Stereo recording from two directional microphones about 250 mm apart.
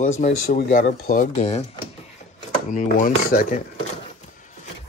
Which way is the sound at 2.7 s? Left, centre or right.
Left.